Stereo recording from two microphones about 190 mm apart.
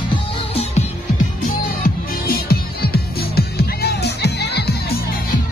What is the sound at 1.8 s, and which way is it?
Music, 55° left (ahead or behind).